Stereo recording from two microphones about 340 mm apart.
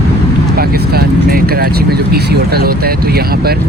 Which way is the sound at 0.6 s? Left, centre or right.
Right.